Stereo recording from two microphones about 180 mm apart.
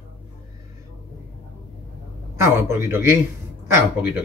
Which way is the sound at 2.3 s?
15° right (ahead or behind).